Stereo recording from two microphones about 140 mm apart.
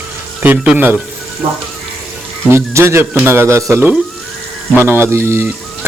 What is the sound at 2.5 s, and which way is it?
Speech, 20° right (ahead or behind).